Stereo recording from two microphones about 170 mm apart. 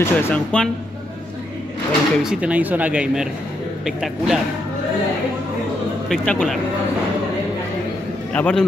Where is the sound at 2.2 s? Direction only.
10° right (ahead or behind).